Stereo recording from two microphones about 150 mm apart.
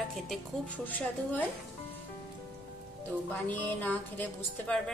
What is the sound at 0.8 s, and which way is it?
Speech, 10° left (ahead or behind).